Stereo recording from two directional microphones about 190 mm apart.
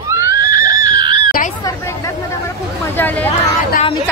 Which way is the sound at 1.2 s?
45° left (ahead or behind).